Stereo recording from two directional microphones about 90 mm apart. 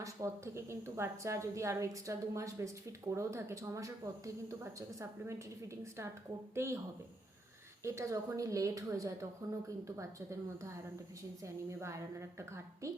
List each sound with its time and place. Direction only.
0.0 s a woman's voice: 35° right (ahead or behind)
6.5 s speech: 30° right (ahead or behind)
7.9 s a woman's voice: 35° right (ahead or behind)